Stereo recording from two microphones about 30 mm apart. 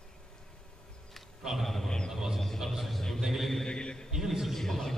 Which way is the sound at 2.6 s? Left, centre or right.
Centre.